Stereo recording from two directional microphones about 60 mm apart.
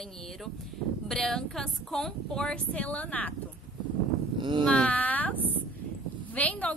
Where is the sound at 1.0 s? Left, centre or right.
Centre; by 3.3 s left.